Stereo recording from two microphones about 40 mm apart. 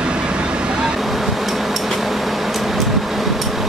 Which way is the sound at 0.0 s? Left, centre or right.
Right.